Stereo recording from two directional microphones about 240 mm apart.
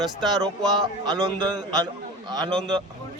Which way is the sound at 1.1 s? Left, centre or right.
Centre.